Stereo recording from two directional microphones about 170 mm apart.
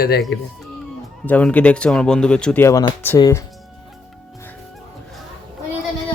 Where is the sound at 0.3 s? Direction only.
90° left.